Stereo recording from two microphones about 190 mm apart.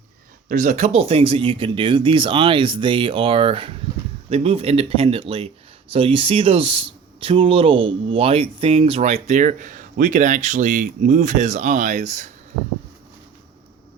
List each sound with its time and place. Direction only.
0.4 s speech: 40° right (ahead or behind)